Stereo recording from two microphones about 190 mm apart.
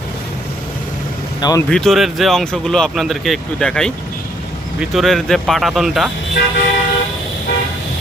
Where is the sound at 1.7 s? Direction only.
Centre (ahead or behind).